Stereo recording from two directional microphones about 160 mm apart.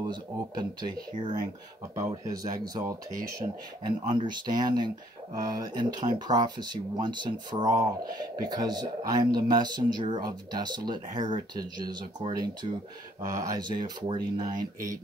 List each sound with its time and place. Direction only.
0.0 s speech: 25° right (ahead or behind)
3.4 s speech: 35° right (ahead or behind)